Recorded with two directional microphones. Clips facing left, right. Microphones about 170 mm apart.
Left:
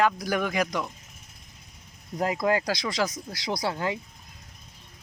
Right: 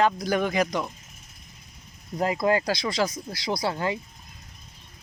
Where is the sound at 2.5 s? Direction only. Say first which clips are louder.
Right 2 dB; 15° left (ahead or behind).